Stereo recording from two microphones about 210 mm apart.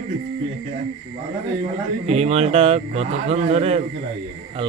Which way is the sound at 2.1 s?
30° right (ahead or behind).